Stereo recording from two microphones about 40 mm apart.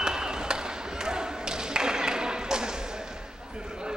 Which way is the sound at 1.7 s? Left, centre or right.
Centre.